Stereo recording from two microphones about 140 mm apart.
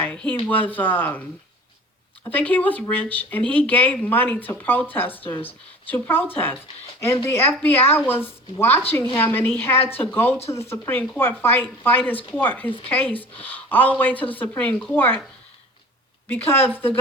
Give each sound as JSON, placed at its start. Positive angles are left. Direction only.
{"t": 0.0, "sound": "speech", "side_deg": 10}
{"t": 2.3, "sound": "speech", "side_deg": 10}
{"t": 16.3, "sound": "speech", "side_deg": 15}